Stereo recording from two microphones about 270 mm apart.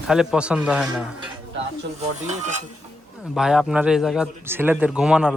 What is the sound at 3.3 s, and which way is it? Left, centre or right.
Speech, centre.